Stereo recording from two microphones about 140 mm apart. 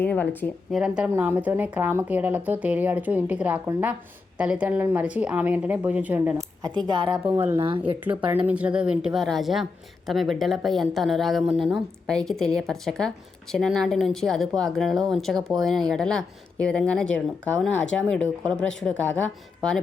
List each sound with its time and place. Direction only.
0.0 s a woman's voice: 10° left (ahead or behind)
0.7 s a woman's voice: 5° right (ahead or behind)
6.3 s a woman's voice: 30° right (ahead or behind)
7.1 s a woman's voice: 15° right (ahead or behind); by 19.2 s 5° left (ahead or behind)